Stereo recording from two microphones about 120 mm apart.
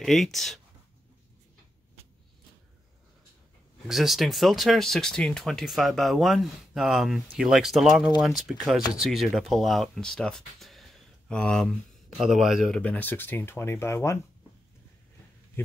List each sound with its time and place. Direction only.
0.0 s speech: centre (ahead or behind)
3.8 s speech: centre (ahead or behind)
12.7 s speech: 10° left (ahead or behind)